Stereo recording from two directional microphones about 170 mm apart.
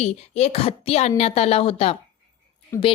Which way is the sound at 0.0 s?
40° left (ahead or behind).